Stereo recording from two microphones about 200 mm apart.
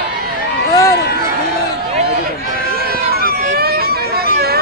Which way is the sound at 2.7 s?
50° right (ahead or behind).